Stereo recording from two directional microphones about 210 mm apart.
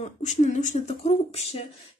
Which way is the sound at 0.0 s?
30° left (ahead or behind).